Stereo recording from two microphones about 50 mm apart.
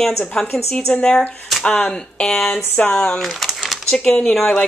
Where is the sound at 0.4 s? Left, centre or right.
Centre.